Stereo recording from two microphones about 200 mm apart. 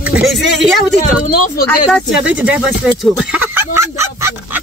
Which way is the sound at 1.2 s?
45° left (ahead or behind).